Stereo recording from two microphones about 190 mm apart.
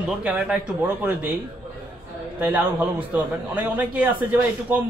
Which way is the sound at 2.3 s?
5° right (ahead or behind).